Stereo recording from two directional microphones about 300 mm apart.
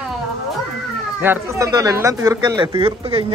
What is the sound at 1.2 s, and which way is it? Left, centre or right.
Speech, centre.